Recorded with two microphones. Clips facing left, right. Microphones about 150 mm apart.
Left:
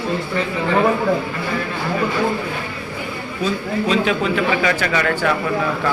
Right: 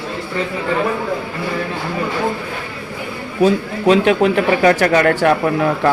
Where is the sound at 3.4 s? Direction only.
65° right (ahead or behind).